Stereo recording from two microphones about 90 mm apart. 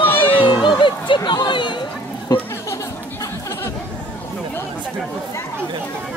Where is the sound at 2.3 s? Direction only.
45° left (ahead or behind).